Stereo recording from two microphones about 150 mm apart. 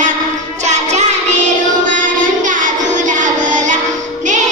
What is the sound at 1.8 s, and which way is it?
Child singing, 60° right (ahead or behind).